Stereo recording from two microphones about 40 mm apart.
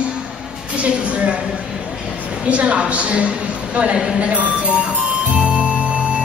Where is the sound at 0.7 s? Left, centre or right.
Right.